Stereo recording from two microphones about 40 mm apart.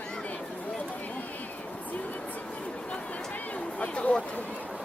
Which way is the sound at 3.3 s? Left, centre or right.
Left.